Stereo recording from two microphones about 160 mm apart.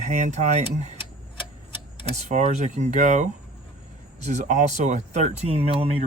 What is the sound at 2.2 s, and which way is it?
Speech, 45° right (ahead or behind).